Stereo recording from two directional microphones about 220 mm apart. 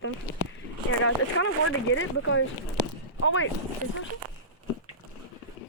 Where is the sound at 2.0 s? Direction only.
65° left (ahead or behind).